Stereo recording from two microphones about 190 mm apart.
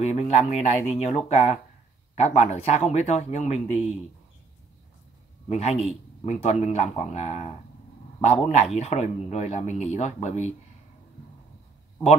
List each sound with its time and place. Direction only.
0.0 s a man's voice: 35° left (ahead or behind)
5.5 s a man's voice: 35° left (ahead or behind)